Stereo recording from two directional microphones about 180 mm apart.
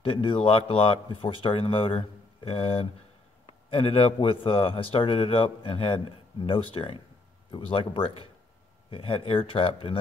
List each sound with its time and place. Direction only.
0.0 s a man's voice: 30° left (ahead or behind)